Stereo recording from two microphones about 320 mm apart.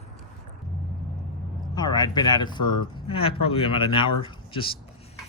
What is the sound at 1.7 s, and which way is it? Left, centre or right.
Speech, centre.